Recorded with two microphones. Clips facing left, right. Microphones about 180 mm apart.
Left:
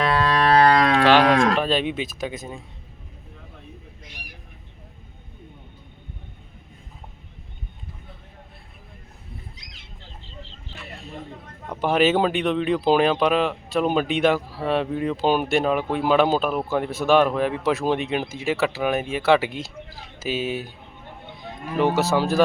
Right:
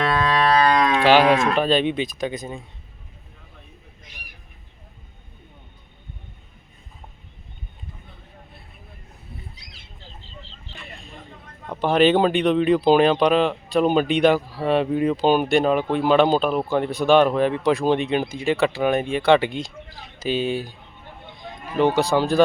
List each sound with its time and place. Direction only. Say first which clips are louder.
0.5 s music: left 4 dB; 65° left (ahead or behind)
1.5 s speech: right 3 dB; centre (ahead or behind)
11.7 s speech: right 2 dB; 5° left (ahead or behind)